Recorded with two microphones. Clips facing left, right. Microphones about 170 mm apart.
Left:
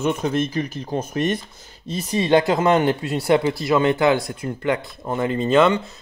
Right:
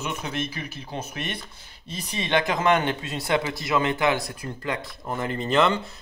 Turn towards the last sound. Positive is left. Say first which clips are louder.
# left 5 dB
turn(degrees=20)  # may be behind; listen again after turning